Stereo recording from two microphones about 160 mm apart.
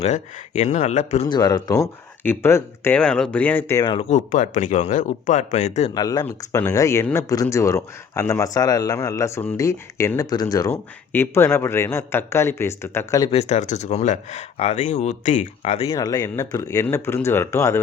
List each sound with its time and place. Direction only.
0.0 s speech: 45° left (ahead or behind)
1.3 s speech: 25° left (ahead or behind)
2.2 s a man's voice: 15° left (ahead or behind)
4.1 s speech: 50° left (ahead or behind)
5.9 s a man's voice: 25° left (ahead or behind)
13.3 s speech: 45° left (ahead or behind)
16.0 s a man's voice: 20° left (ahead or behind)